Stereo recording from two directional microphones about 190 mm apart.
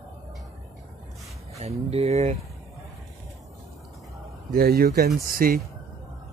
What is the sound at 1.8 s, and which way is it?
Speech, 35° right (ahead or behind).